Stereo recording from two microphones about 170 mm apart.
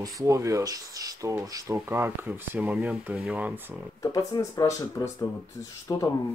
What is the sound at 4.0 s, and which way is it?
Speech, 20° left (ahead or behind).